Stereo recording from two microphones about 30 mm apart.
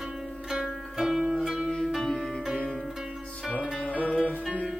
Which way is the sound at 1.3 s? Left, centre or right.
Right.